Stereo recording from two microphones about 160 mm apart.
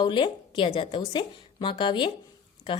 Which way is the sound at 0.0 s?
30° left (ahead or behind).